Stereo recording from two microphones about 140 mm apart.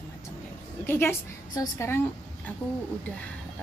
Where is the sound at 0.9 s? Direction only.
15° left (ahead or behind).